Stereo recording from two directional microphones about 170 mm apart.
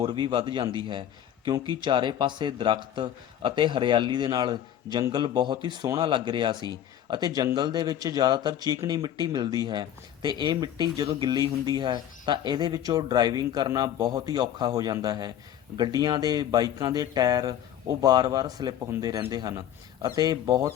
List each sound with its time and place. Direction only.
0.0 s speech: 30° right (ahead or behind)